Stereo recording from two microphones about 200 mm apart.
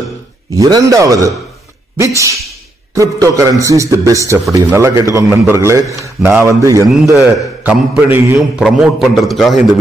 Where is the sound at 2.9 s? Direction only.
15° right (ahead or behind).